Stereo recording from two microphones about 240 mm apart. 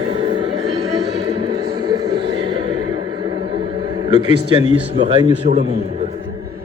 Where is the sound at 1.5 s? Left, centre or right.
Centre.